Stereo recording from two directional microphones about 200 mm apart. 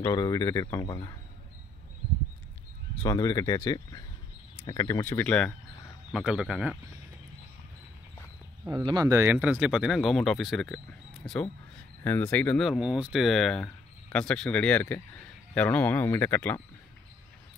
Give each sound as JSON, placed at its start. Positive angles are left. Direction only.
{"t": 0.0, "sound": "speech", "side_deg": 20}
{"t": 3.0, "sound": "speech", "side_deg": 20}
{"t": 8.6, "sound": "speech", "side_deg": -20}